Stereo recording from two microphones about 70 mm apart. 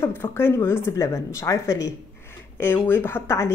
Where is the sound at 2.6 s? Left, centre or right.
Left.